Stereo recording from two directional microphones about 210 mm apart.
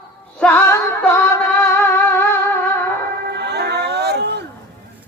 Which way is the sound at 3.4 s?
50° right (ahead or behind).